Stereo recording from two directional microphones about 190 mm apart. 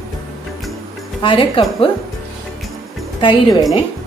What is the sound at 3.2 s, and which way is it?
Speech, 20° left (ahead or behind).